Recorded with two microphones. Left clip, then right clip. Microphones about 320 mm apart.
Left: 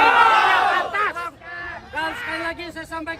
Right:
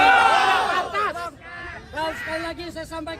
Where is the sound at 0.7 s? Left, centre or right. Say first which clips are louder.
Left 2 dB; centre.